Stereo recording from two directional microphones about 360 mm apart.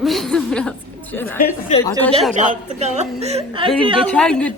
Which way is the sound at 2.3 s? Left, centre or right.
Centre.